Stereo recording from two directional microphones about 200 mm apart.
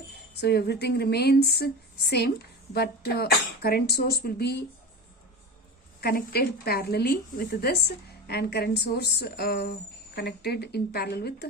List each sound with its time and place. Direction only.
0.3 s a woman's voice: 55° left (ahead or behind)
6.0 s a woman's voice: 50° left (ahead or behind)